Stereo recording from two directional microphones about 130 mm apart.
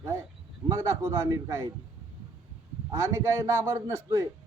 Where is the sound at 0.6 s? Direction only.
25° right (ahead or behind).